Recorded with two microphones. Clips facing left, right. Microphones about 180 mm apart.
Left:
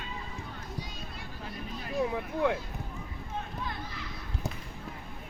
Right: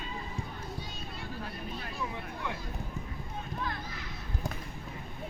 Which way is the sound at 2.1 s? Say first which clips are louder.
Left 10 dB; 90° left.